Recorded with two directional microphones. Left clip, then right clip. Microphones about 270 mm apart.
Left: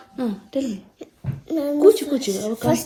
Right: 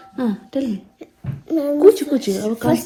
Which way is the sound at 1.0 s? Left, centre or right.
Left.